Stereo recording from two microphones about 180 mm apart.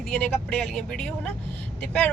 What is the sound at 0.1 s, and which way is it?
A woman's voice, 5° left (ahead or behind).